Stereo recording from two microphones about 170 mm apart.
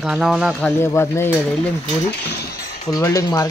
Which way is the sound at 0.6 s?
15° left (ahead or behind).